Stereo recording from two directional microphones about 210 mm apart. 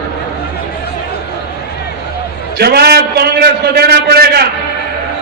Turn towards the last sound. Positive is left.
turn(degrees=-50)  # may be behind; listen again after turning